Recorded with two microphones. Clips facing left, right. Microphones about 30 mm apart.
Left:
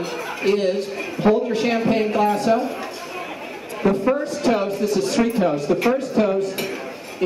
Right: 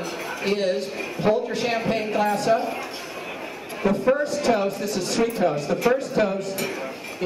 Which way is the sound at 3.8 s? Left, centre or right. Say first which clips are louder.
Left 3 dB; left.